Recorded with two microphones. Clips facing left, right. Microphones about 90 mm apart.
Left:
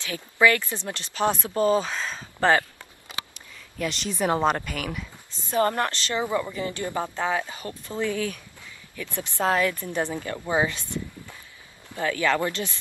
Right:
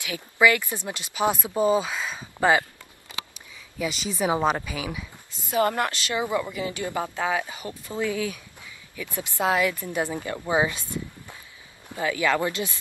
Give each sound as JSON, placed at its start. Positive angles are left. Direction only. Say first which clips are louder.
{"t": 0.0, "sound": "speech", "louder": "even", "side_deg": -15}
{"t": 3.7, "sound": "speech", "louder": "even", "side_deg": -5}